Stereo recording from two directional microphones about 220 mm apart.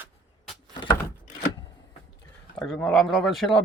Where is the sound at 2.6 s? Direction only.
5° left (ahead or behind).